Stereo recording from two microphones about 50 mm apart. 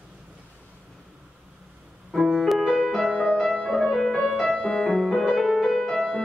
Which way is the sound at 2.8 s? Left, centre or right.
Centre.